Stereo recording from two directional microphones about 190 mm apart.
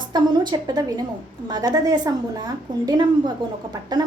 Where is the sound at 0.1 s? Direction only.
20° right (ahead or behind).